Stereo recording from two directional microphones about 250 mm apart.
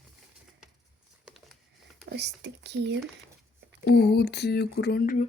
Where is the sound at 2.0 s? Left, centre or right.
Right.